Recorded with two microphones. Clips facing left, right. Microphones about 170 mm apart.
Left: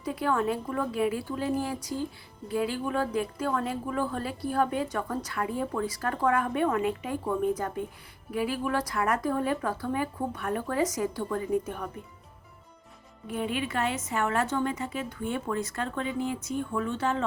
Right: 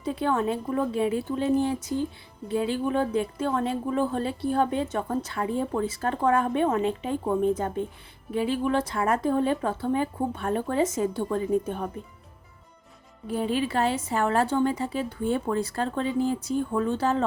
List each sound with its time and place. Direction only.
0.0 s a woman's voice: 25° right (ahead or behind)
13.2 s a woman's voice: 35° right (ahead or behind)